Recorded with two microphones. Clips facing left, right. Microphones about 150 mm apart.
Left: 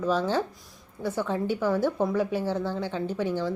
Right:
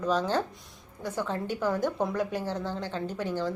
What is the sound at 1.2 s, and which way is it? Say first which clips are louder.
A woman's voice: left 3 dB; 10° left (ahead or behind).